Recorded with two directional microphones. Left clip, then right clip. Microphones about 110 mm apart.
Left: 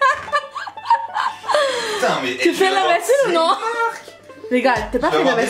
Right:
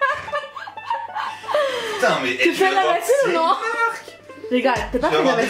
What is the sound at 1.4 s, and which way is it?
Chuckle, 20° left (ahead or behind).